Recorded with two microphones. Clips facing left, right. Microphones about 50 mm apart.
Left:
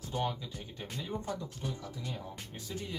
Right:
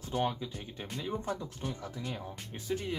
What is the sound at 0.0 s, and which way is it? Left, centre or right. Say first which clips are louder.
Speech: right 2 dB; right.